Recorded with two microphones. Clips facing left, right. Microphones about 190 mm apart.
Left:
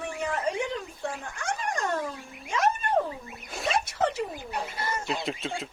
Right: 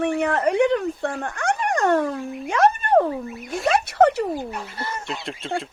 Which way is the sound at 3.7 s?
65° right (ahead or behind).